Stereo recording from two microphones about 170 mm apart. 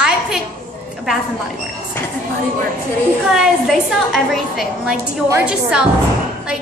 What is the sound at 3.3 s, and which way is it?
A woman's voice, centre (ahead or behind).